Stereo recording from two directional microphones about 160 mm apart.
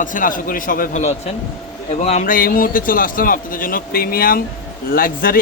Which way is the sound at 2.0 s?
45° left (ahead or behind).